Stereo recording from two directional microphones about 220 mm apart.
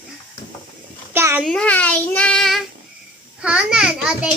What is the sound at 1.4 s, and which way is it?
A child's voice, 5° left (ahead or behind).